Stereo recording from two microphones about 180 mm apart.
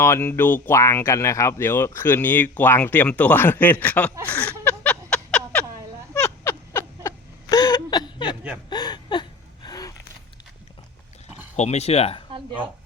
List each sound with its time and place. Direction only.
0.0 s speech: 15° left (ahead or behind)
4.6 s a sound: 10° left (ahead or behind); by 8.4 s 25° left (ahead or behind)
8.7 s gasp: 25° left (ahead or behind)
9.6 s a sound: 20° left (ahead or behind)
11.5 s speech: 40° left (ahead or behind)
12.3 s speech: 30° right (ahead or behind)